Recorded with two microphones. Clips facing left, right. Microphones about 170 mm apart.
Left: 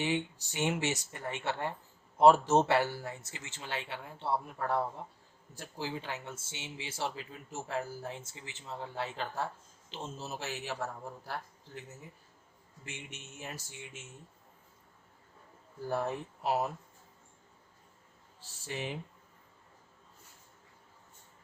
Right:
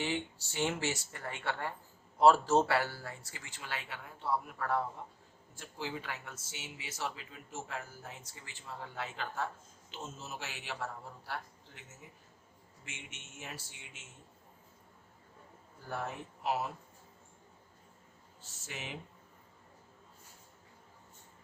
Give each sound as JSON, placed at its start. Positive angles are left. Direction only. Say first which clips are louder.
{"t": 0.0, "sound": "speech", "louder": "left 3 dB", "side_deg": 15}
{"t": 12.8, "sound": "speech", "louder": "left 5 dB", "side_deg": 35}
{"t": 15.9, "sound": "speech", "louder": "left 6 dB", "side_deg": 35}
{"t": 18.3, "sound": "speech", "louder": "left 7 dB", "side_deg": 35}